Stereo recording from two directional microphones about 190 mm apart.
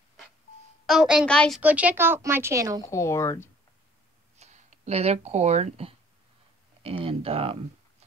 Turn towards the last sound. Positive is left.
turn(degrees=-30)  # may be behind; listen again after turning